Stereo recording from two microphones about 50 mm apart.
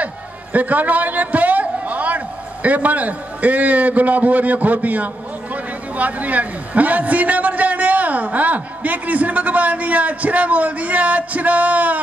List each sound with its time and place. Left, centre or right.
0.0 s a man's voice: right